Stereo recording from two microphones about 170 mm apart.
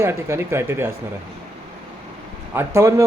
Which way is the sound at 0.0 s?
15° right (ahead or behind).